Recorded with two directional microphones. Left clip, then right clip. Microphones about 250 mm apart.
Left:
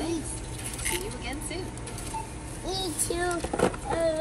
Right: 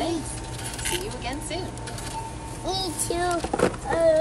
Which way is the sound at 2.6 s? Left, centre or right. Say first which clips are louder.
Right 3 dB; centre.